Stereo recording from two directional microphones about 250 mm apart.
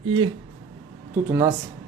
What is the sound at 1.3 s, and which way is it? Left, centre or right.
Speech, centre.